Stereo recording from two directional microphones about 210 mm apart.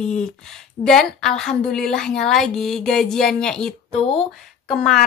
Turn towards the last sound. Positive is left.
turn(degrees=0)  # may be behind; listen again after turning